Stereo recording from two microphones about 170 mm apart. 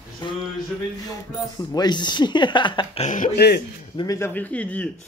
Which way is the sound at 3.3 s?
70° left (ahead or behind).